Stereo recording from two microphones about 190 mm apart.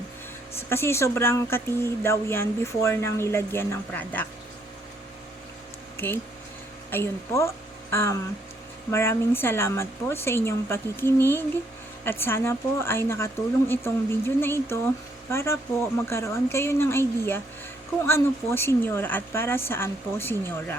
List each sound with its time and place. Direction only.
0.7 s speech: 15° left (ahead or behind)
6.9 s a woman's voice: 15° left (ahead or behind)